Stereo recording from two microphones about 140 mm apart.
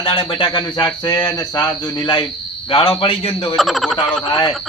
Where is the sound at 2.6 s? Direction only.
40° left (ahead or behind).